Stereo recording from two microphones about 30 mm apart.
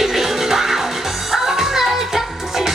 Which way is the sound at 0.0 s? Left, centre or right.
Centre.